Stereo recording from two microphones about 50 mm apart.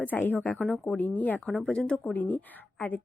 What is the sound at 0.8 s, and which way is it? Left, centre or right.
Speech, left.